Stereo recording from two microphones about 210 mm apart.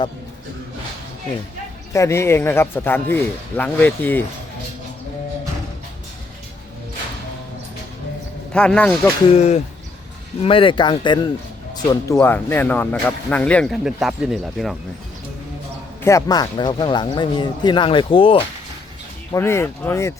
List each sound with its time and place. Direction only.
1.9 s speech: 15° left (ahead or behind)
8.5 s speech: 5° left (ahead or behind)
9.3 s speech: 30° left (ahead or behind)
12.1 s speech: 10° left (ahead or behind)
16.0 s speech: 15° left (ahead or behind)
19.3 s speech: 10° left (ahead or behind)